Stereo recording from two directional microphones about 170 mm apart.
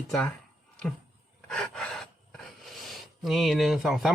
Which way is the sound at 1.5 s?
Centre (ahead or behind).